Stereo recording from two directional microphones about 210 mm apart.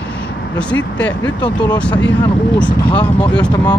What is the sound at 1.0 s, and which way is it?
Speech, 5° left (ahead or behind).